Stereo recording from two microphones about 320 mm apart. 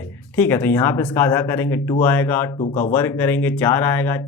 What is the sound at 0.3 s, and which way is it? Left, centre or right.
Speech, centre.